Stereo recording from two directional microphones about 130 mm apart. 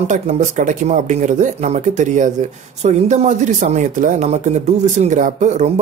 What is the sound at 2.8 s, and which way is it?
Speech, 60° right (ahead or behind).